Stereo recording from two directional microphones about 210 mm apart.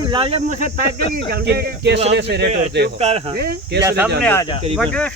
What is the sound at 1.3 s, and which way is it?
Speech, 50° right (ahead or behind).